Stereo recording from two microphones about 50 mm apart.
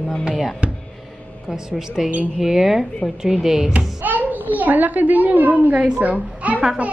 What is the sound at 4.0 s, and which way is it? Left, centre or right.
A child's voice, right.